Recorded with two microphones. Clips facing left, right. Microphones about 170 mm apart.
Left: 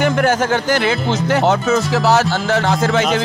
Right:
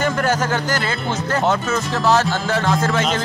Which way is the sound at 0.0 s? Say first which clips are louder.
Left 4 dB; 55° left (ahead or behind).